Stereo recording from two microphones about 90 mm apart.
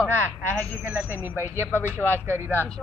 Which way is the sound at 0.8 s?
15° right (ahead or behind).